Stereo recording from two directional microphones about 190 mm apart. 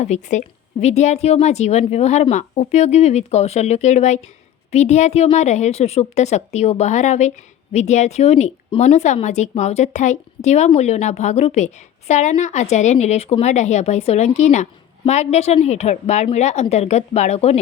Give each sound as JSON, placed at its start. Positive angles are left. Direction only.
{"t": 0.0, "sound": "a woman's voice", "side_deg": 40}